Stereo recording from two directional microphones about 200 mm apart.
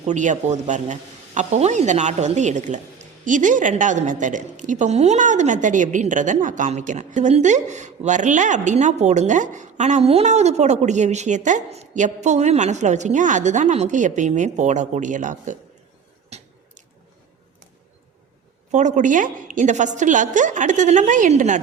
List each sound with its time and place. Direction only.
0.0 s a woman's voice: 35° right (ahead or behind)
18.7 s a woman's voice: 35° right (ahead or behind)